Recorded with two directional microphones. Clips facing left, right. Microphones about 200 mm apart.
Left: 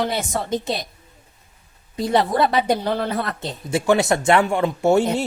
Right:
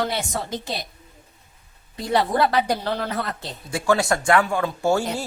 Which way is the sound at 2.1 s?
20° left (ahead or behind).